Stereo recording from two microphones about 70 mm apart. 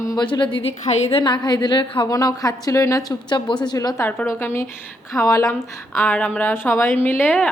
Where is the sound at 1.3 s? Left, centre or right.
Left.